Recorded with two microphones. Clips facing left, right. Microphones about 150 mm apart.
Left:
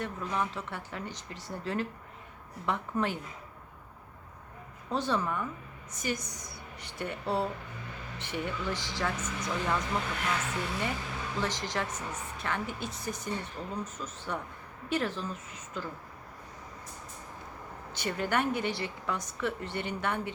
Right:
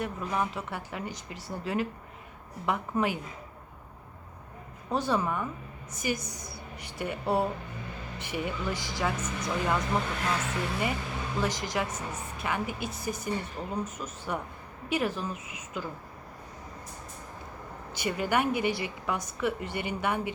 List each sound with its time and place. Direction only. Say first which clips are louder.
0.0 s a woman's voice: right 2 dB; 10° right (ahead or behind)
4.9 s a woman's voice: right 2 dB; 10° right (ahead or behind)
9.9 s speech: right 3 dB; 30° right (ahead or behind)
11.3 s a woman's voice: right 3 dB; 10° right (ahead or behind)
17.9 s a woman's voice: right 2 dB; 10° right (ahead or behind)